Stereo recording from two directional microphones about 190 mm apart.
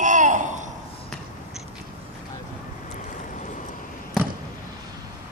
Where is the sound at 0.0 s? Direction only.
40° right (ahead or behind).